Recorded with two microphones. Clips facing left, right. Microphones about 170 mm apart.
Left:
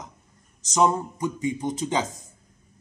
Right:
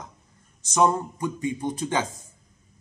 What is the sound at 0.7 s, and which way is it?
Speech, 15° left (ahead or behind).